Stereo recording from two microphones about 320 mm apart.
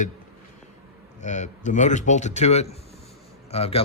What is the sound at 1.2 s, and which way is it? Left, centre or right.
Speech, left.